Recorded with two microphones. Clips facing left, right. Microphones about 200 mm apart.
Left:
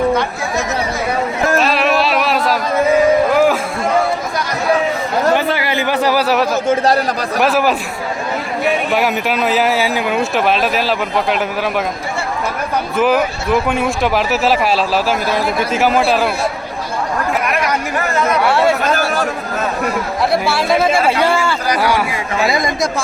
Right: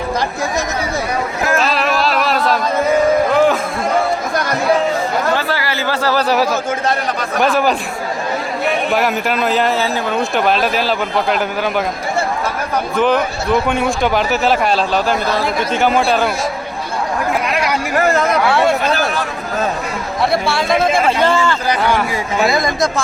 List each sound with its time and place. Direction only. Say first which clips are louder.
1.5 s a sound: left 2 dB; centre (ahead or behind)
3.3 s music: even; 5° left (ahead or behind)
5.3 s a sound: left 3 dB; 20° left (ahead or behind)
6.2 s speech: even; centre (ahead or behind)
6.7 s a man's voice: left 5 dB; 35° left (ahead or behind)
7.4 s speech: even; 5° left (ahead or behind)
8.9 s speech: even; centre (ahead or behind)
13.0 s speech: left 1 dB; 5° left (ahead or behind)
18.8 s a man's voice: left 1 dB; 45° left (ahead or behind)
20.3 s speech: left 1 dB; 5° left (ahead or behind)
22.6 s speech: right 1 dB; 10° left (ahead or behind)